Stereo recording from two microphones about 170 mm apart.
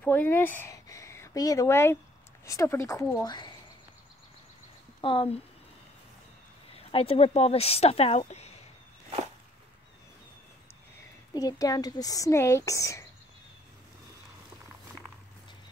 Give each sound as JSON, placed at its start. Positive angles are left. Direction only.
{"t": 0.0, "sound": "speech", "side_deg": 10}
{"t": 5.0, "sound": "speech", "side_deg": 30}
{"t": 6.7, "sound": "speech", "side_deg": 35}
{"t": 11.3, "sound": "speech", "side_deg": 20}